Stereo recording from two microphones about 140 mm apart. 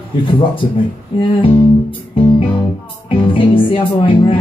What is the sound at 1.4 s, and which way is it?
Music, 40° left (ahead or behind).